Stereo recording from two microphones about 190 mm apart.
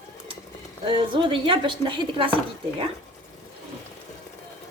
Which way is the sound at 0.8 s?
25° right (ahead or behind).